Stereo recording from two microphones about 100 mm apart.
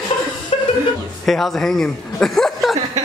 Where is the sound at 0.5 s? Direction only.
90° left.